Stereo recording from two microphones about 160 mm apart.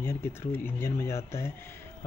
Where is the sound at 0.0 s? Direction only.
15° left (ahead or behind).